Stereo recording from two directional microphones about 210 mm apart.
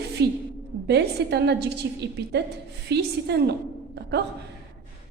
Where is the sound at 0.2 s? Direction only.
50° right (ahead or behind).